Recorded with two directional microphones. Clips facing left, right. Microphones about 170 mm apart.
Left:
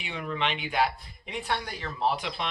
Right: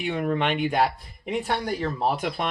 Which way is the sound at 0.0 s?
50° right (ahead or behind).